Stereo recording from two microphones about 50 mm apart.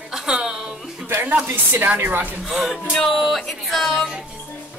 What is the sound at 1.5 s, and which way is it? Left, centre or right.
Speech, right.